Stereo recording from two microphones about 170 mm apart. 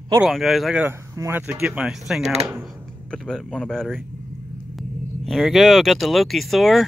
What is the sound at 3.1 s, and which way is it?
Speech, 5° left (ahead or behind).